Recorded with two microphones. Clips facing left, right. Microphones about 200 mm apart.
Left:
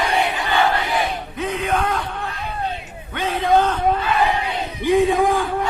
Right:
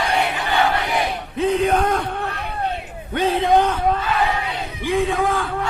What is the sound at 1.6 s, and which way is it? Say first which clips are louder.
Yell: right 3 dB; 40° right (ahead or behind).